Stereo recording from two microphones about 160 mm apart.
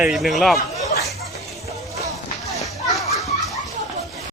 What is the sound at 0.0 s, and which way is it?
Speech, centre (ahead or behind).